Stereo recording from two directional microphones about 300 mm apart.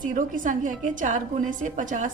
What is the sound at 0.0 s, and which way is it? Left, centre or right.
Speech, right.